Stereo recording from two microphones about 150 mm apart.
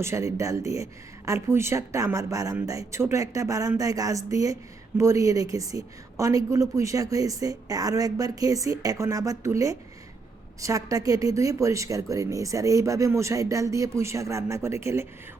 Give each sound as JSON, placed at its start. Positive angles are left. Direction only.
{"t": 0.0, "sound": "a woman's voice", "side_deg": -20}